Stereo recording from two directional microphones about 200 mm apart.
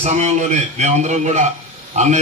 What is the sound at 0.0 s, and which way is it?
A man's voice, 35° right (ahead or behind).